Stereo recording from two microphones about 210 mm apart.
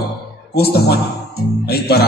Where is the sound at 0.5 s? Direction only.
50° left (ahead or behind).